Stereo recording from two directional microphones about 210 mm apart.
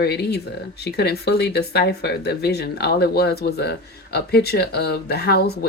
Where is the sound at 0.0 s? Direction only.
50° left (ahead or behind).